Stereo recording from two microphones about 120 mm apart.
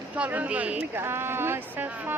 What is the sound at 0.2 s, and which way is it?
Speech, 10° right (ahead or behind).